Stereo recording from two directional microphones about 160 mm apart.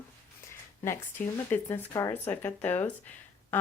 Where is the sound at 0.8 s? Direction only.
15° left (ahead or behind).